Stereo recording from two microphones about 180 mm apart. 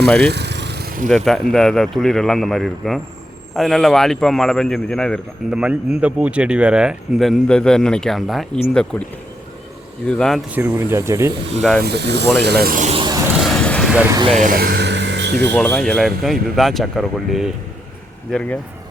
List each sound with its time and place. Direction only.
0.0 s speech: 5° left (ahead or behind)
0.3 s a sound: 70° right (ahead or behind); by 1.1 s 55° right (ahead or behind)
1.1 s a man's voice: centre (ahead or behind)
10.1 s a man's voice: 5° left (ahead or behind)
10.5 s speech: 10° right (ahead or behind)
11.8 s speech: 65° right (ahead or behind); by 12.9 s 50° right (ahead or behind)
12.9 s a sound: 25° right (ahead or behind)
13.4 s vehicle: 5° left (ahead or behind)
14.3 s speech: 45° right (ahead or behind); by 15.5 s 70° right (ahead or behind)
15.5 s a man's voice: 10° left (ahead or behind)